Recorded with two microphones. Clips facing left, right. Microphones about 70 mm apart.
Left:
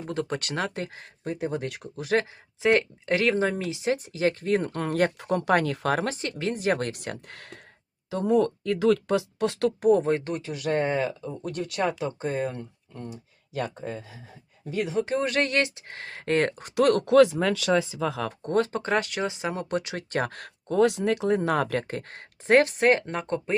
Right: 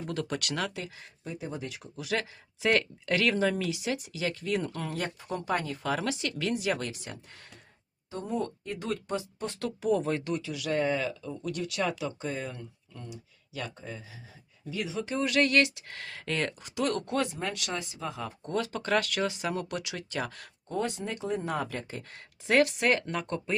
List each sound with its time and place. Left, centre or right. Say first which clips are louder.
0.0 s speech: left 3 dB; left
2.6 s speech: left 5 dB; left
8.1 s speech: left 10 dB; left
9.9 s speech: left 2 dB; left
15.0 s speech: left 2 dB; left
18.4 s speech: left 6 dB; left
20.7 s speech: left 10 dB; left